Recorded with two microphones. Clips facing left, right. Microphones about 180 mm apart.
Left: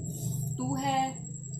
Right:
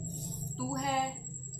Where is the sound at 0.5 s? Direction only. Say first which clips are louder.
Left 3 dB; 25° left (ahead or behind).